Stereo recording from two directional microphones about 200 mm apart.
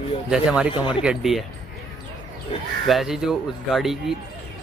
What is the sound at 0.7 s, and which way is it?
Speech, 25° left (ahead or behind).